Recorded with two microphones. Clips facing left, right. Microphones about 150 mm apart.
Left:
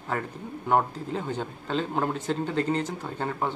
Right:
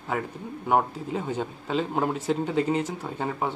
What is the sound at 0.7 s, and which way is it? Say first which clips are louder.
Speech: right 1 dB; 5° right (ahead or behind).